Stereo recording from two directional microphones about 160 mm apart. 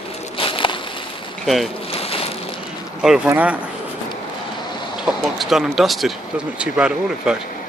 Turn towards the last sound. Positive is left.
turn(degrees=-5)  # may be behind; listen again after turning